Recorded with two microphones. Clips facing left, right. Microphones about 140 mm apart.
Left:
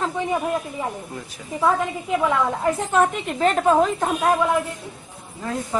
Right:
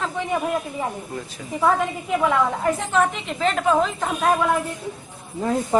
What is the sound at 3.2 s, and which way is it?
Speech, 40° left (ahead or behind).